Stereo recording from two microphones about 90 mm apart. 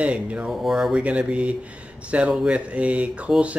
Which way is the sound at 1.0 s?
15° right (ahead or behind).